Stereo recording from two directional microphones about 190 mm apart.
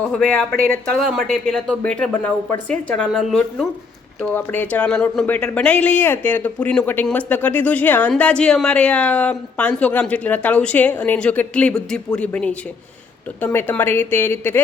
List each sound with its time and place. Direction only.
0.1 s speech: 5° left (ahead or behind)
0.5 s speech: 50° right (ahead or behind)
0.9 s speech: 5° left (ahead or behind)